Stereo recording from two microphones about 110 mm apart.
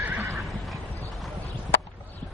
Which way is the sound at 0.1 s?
25° right (ahead or behind).